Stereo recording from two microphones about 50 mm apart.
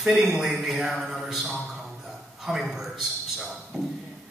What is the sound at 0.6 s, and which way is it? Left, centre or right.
Music, centre.